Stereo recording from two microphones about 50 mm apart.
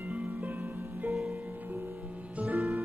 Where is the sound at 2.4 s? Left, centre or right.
Right.